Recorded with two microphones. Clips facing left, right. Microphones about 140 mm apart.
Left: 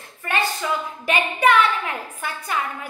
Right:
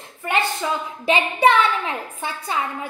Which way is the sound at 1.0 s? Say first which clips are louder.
Right 2 dB; 30° right (ahead or behind).